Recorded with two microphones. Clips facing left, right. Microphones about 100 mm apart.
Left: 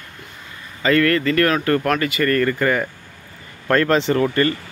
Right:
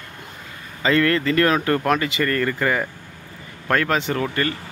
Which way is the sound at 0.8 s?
20° right (ahead or behind).